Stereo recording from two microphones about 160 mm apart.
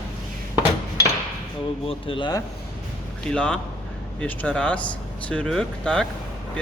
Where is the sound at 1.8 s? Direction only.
35° left (ahead or behind).